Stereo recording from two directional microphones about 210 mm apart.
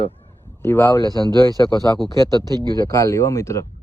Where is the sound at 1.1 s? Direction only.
20° right (ahead or behind).